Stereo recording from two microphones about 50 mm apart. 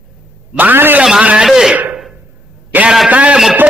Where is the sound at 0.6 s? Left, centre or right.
Right.